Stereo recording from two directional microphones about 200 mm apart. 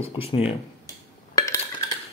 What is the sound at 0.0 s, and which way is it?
Speech, 25° left (ahead or behind).